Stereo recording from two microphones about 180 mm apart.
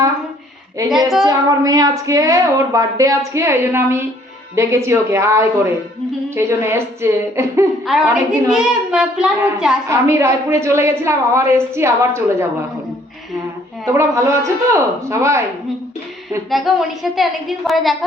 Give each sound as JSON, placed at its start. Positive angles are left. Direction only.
{"t": 0.9, "sound": "a child's voice", "side_deg": 0}
{"t": 1.2, "sound": "a woman's voice", "side_deg": -20}
{"t": 7.9, "sound": "a child's voice", "side_deg": -5}
{"t": 9.9, "sound": "a woman's voice", "side_deg": -15}
{"t": 13.8, "sound": "a woman's voice", "side_deg": -15}
{"t": 16.5, "sound": "a child's voice", "side_deg": 0}